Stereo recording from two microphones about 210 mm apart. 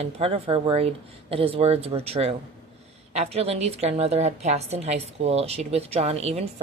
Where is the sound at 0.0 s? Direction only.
30° right (ahead or behind).